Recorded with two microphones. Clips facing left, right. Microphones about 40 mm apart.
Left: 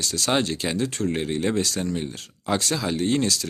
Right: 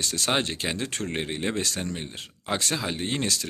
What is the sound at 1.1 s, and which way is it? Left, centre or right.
A man's voice, right.